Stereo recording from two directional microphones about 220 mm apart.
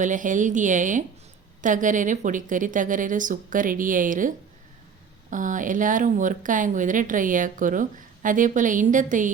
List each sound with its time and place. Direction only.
0.0 s speech: 35° right (ahead or behind)